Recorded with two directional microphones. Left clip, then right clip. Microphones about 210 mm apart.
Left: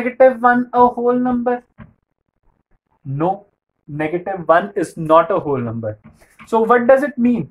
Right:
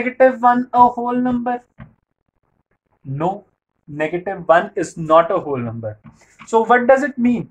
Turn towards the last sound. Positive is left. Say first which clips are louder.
# left 2 dB
turn(degrees=15)  # may be behind; listen again after turning